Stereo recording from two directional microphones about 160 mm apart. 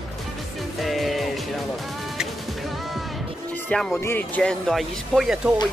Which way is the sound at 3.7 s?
5° left (ahead or behind).